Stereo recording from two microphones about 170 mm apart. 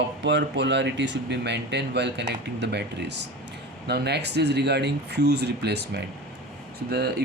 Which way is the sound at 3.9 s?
80° right.